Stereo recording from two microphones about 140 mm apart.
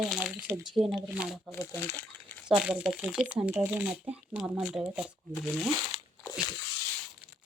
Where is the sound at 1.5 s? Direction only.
15° left (ahead or behind).